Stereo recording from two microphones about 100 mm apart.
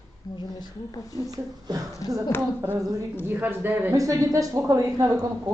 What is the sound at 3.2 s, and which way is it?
Speech, 20° right (ahead or behind).